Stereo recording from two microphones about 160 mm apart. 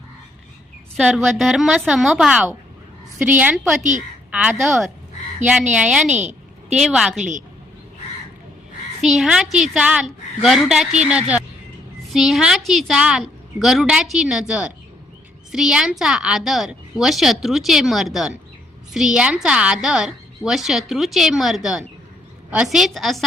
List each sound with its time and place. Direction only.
0.9 s a woman's voice: 5° right (ahead or behind)
6.1 s a sound: 45° right (ahead or behind)
6.7 s a woman's voice: 5° right (ahead or behind)
9.0 s a woman's voice: 5° right (ahead or behind)